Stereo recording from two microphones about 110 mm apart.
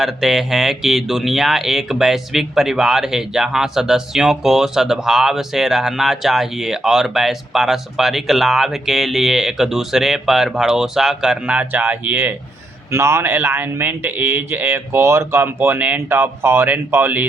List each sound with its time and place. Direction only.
0.0 s speech: 5° right (ahead or behind)